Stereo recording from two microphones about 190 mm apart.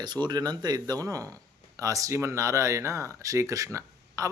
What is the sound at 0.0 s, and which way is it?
Speech, 25° right (ahead or behind).